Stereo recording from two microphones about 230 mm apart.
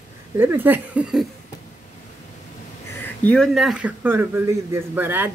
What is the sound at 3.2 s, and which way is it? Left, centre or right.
A man's voice, centre.